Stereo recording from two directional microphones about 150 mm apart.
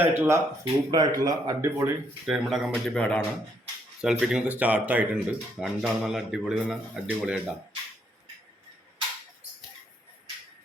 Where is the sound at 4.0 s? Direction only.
5° right (ahead or behind).